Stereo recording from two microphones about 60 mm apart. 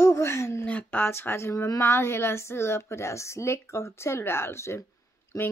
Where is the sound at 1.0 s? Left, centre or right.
Left.